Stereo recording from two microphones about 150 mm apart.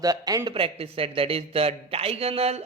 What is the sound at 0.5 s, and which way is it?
A man's voice, 40° right (ahead or behind).